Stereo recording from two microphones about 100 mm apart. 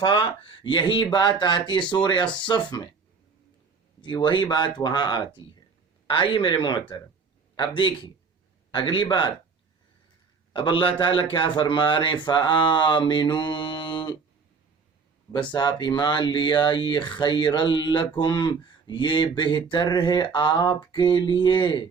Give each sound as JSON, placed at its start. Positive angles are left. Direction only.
{"t": 0.0, "sound": "speech", "side_deg": 55}
{"t": 4.0, "sound": "speech", "side_deg": 50}
{"t": 6.1, "sound": "speech", "side_deg": 60}
{"t": 10.5, "sound": "speech", "side_deg": 60}
{"t": 15.3, "sound": "speech", "side_deg": 50}